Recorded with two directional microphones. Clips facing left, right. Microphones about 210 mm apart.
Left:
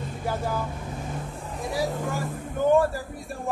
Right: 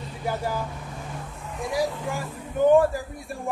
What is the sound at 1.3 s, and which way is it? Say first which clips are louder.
Vehicle: right 4 dB; 40° left (ahead or behind).